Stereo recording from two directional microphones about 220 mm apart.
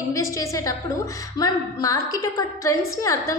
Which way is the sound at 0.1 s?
15° left (ahead or behind).